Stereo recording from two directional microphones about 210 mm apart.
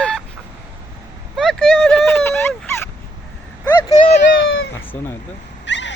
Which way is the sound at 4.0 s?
40° left (ahead or behind).